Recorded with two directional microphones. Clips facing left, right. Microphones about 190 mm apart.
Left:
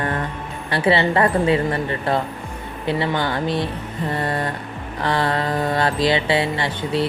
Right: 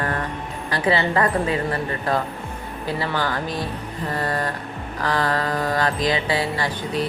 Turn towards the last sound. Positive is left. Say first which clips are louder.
# left 3 dB
turn(degrees=25)  # may be behind; listen again after turning